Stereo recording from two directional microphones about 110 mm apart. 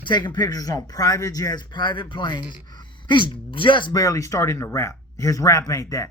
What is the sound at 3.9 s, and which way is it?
Speech, 30° left (ahead or behind).